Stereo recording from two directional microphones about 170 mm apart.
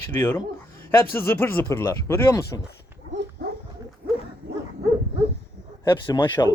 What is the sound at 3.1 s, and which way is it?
Dog, 90° right.